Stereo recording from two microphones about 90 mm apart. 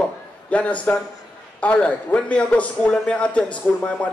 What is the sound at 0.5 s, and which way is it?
A man's voice, 15° left (ahead or behind).